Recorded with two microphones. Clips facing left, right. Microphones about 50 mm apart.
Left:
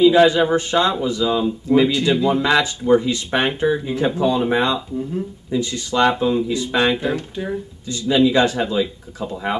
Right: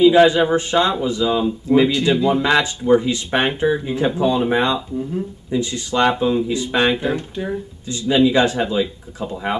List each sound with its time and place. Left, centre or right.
0.0 s speech: centre
6.4 s speech: right
6.7 s speech: centre
8.1 s speech: centre